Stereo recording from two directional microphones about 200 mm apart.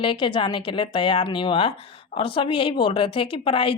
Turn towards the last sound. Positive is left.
turn(degrees=25)  # may be behind; listen again after turning